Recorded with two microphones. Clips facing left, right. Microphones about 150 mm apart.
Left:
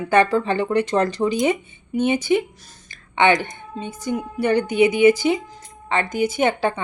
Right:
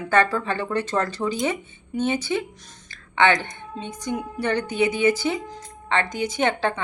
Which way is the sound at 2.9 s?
15° left (ahead or behind).